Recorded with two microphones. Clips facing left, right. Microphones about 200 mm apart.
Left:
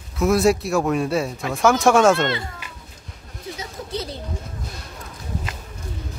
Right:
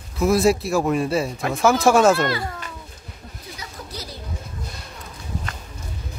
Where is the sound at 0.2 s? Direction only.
Centre (ahead or behind).